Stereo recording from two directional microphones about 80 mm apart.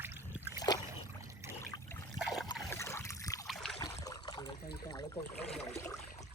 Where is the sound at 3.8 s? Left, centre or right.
Left.